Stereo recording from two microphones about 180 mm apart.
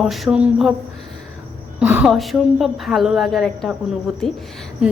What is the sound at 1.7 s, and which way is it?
Speech, 10° right (ahead or behind).